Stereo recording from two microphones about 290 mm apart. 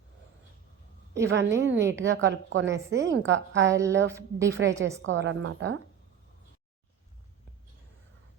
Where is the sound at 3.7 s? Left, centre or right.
Centre.